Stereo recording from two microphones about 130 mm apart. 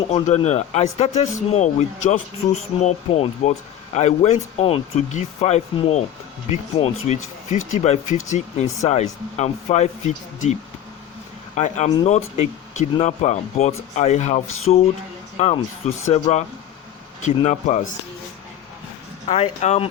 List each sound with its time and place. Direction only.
0.3 s speech: 60° left (ahead or behind)
19.3 s speech: 55° left (ahead or behind)